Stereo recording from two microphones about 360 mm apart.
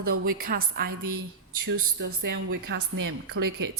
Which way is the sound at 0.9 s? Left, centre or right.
Right.